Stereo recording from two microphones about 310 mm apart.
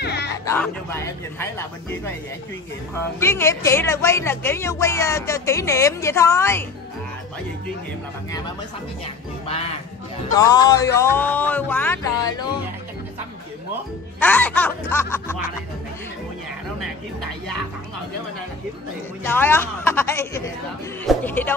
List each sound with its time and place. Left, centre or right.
0.0 s music: left
0.5 s speech: centre
3.2 s speech: centre
9.0 s music: centre
10.3 s speech: centre
14.2 s music: centre
19.2 s speech: centre
21.1 s music: centre